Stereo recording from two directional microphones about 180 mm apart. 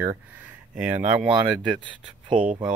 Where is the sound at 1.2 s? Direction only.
30° right (ahead or behind).